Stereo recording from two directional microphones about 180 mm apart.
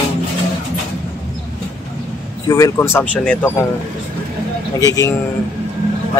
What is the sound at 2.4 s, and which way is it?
Speech, 20° left (ahead or behind).